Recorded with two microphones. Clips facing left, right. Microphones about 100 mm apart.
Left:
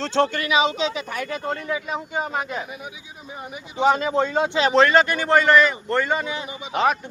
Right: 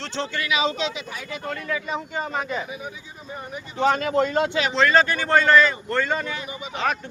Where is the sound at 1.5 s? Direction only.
25° left (ahead or behind).